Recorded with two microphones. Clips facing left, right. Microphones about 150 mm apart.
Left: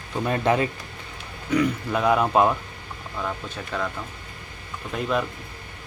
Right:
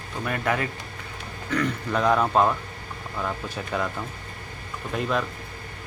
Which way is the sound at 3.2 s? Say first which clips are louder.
Right 1 dB; 10° right (ahead or behind).